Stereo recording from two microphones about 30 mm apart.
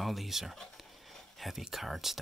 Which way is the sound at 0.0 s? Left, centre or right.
Centre.